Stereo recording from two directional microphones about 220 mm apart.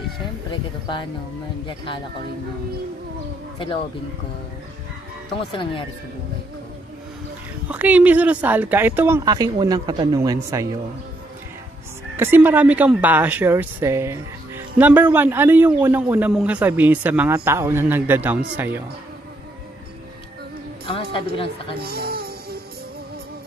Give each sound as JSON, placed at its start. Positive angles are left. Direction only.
{"t": 0.5, "sound": "speech", "side_deg": 20}
{"t": 3.5, "sound": "speech", "side_deg": 20}
{"t": 5.5, "sound": "speech", "side_deg": 20}
{"t": 7.6, "sound": "a man's voice", "side_deg": -5}
{"t": 12.2, "sound": "a man's voice", "side_deg": -10}
{"t": 20.8, "sound": "a woman's voice", "side_deg": 25}
{"t": 21.7, "sound": "music", "side_deg": -45}